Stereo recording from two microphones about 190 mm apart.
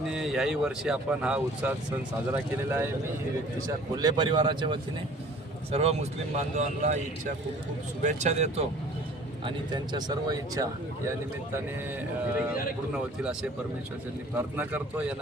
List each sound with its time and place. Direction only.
0.1 s speech: centre (ahead or behind)
3.9 s speech: 20° right (ahead or behind); by 7.0 s 40° right (ahead or behind)
8.0 s speech: 35° right (ahead or behind)
9.4 s speech: 25° right (ahead or behind)
12.9 s speech: 5° right (ahead or behind)